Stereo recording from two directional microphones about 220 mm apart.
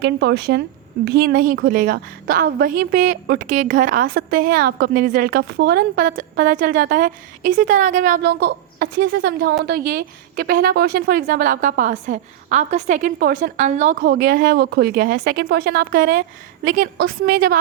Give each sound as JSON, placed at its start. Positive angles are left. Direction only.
{"t": 0.0, "sound": "a woman's voice", "side_deg": -50}